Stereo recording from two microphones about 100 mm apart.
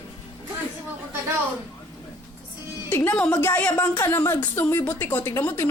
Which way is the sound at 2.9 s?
25° left (ahead or behind).